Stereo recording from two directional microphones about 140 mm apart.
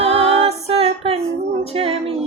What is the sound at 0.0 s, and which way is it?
Music, 45° right (ahead or behind).